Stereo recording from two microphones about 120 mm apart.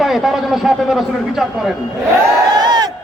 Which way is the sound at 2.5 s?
35° right (ahead or behind).